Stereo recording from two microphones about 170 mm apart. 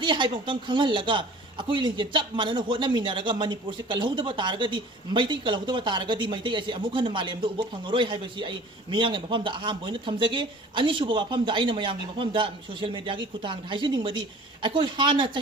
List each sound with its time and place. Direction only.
0.0 s speech: 30° right (ahead or behind)